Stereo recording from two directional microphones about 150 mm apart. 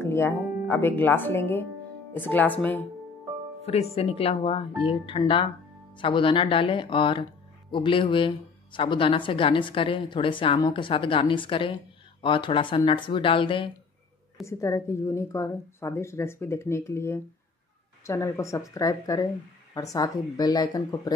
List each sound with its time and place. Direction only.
0.0 s speech: 15° left (ahead or behind)
3.6 s speech: 45° left (ahead or behind)
14.4 s a woman's voice: 20° left (ahead or behind)